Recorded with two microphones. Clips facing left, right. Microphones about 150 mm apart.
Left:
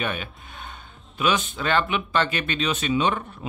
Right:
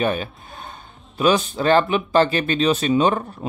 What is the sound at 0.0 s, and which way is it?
Speech, 35° right (ahead or behind).